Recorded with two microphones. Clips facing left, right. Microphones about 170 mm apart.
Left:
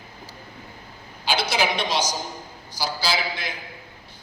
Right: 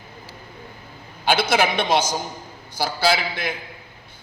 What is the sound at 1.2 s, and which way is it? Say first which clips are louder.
A man's voice: right 4 dB; 55° right (ahead or behind).